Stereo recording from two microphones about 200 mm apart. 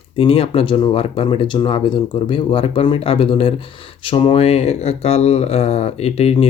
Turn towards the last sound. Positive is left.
turn(degrees=30)  # may be behind; listen again after turning